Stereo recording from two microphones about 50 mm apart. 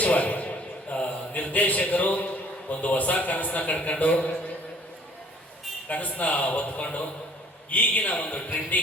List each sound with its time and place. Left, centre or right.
0.0 s a man's voice: left
5.9 s a man's voice: left